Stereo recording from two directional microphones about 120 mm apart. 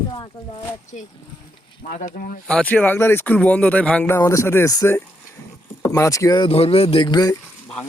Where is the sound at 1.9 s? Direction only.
90° left.